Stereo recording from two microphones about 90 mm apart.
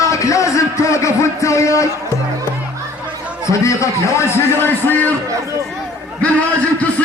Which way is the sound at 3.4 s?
35° left (ahead or behind).